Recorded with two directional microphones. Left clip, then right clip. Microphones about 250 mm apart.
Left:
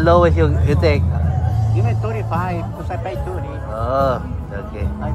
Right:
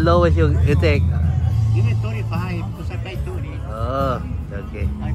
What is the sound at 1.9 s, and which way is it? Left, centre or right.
Music, left.